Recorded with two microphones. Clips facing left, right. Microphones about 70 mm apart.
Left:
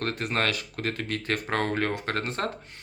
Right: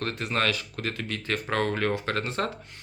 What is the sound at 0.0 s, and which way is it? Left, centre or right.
Speech, left.